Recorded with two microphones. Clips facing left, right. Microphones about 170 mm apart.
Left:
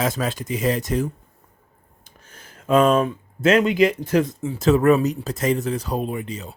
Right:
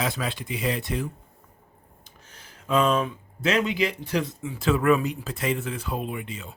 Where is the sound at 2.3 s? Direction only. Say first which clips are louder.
Left 6 dB; 50° left (ahead or behind).